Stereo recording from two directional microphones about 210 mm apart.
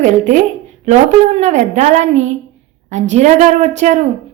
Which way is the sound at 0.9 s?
30° right (ahead or behind).